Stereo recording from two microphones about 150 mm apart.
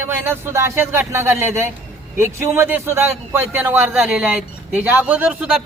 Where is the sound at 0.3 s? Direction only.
15° right (ahead or behind).